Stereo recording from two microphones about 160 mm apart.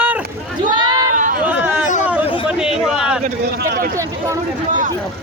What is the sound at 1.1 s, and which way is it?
Chatter, 55° right (ahead or behind).